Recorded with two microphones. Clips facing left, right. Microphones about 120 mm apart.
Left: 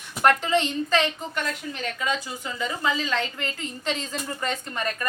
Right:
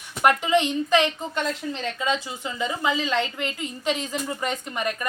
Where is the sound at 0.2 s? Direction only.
15° right (ahead or behind).